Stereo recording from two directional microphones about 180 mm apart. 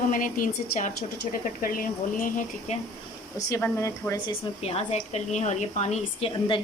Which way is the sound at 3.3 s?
15° left (ahead or behind).